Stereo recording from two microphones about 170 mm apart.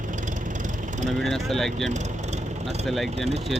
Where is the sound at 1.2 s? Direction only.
Centre (ahead or behind).